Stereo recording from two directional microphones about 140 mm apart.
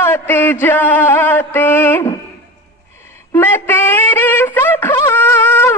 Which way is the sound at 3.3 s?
15° left (ahead or behind).